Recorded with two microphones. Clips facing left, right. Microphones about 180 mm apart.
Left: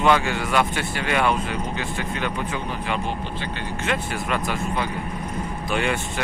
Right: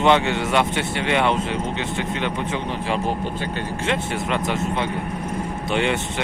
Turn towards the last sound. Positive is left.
turn(degrees=-25)  # may be behind; listen again after turning